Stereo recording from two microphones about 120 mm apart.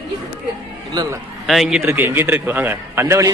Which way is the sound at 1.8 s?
20° right (ahead or behind).